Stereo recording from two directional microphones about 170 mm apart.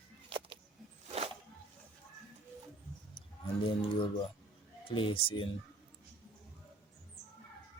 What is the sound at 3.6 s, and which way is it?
Speech, 30° left (ahead or behind).